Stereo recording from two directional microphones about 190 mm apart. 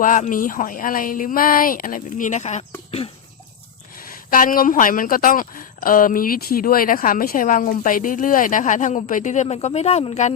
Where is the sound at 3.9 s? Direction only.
50° left (ahead or behind).